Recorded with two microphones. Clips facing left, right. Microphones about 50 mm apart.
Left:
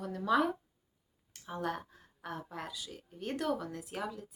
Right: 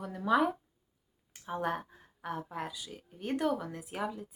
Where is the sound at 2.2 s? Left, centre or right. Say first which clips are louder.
Right 4 dB; centre.